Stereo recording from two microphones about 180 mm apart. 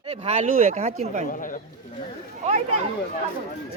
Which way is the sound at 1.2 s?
50° left (ahead or behind).